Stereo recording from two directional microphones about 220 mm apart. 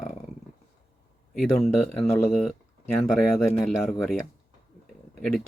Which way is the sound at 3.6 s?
Centre (ahead or behind).